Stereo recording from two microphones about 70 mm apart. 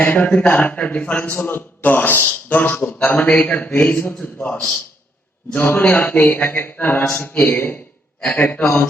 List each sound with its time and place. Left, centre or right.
0.0 s a man's voice: left